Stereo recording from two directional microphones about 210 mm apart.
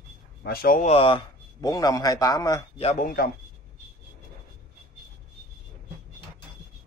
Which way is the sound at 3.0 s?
45° left (ahead or behind).